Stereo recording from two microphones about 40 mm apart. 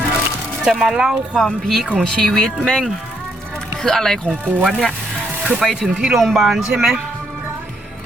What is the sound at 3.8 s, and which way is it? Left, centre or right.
Speech, centre.